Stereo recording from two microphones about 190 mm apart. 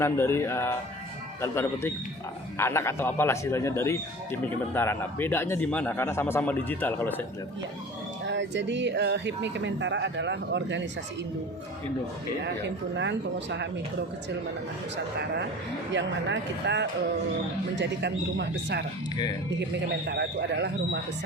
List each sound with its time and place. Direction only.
0.0 s a man's voice: 15° left (ahead or behind)
8.3 s speech: 70° right (ahead or behind)
13.0 s speech: 70° right (ahead or behind)
15.9 s speech: 70° right (ahead or behind)
20.1 s speech: 65° right (ahead or behind)